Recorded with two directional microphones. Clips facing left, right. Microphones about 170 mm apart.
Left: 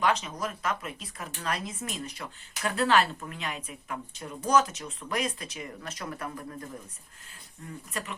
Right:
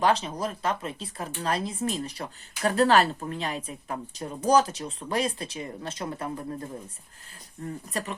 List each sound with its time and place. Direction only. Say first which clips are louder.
0.0 s speech: right 3 dB; 30° right (ahead or behind)
7.9 s speech: right 4 dB; 35° right (ahead or behind)